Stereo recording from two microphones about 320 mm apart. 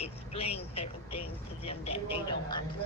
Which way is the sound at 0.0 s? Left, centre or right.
Centre.